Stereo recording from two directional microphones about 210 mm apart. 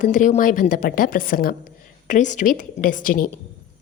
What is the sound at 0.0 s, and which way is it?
A woman's voice, 35° left (ahead or behind).